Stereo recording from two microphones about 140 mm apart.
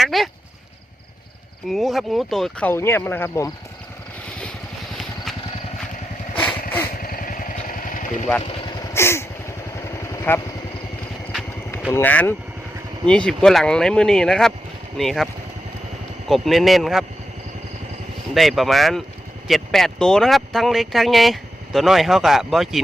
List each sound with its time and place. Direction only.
0.0 s speech: centre (ahead or behind)
1.7 s speech: centre (ahead or behind)
2.6 s speech: 15° left (ahead or behind)
6.4 s vehicle: 10° left (ahead or behind)
7.0 s vehicle: 85° left
8.9 s vehicle: 20° left (ahead or behind)
11.9 s speech: 10° left (ahead or behind)
16.3 s speech: centre (ahead or behind)
18.3 s speech: centre (ahead or behind)